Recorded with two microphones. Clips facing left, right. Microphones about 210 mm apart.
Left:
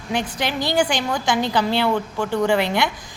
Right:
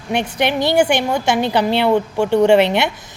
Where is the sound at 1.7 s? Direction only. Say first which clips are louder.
Right 5 dB; 20° right (ahead or behind).